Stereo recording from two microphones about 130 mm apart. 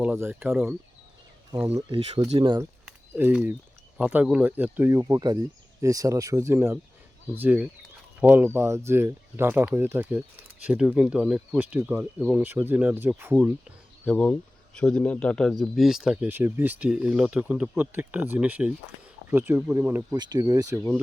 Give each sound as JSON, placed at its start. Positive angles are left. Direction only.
{"t": 0.0, "sound": "speech", "side_deg": -15}
{"t": 1.7, "sound": "speech", "side_deg": -50}
{"t": 3.1, "sound": "speech", "side_deg": -15}
{"t": 14.0, "sound": "speech", "side_deg": 10}
{"t": 16.3, "sound": "speech", "side_deg": -15}
{"t": 20.1, "sound": "speech", "side_deg": -30}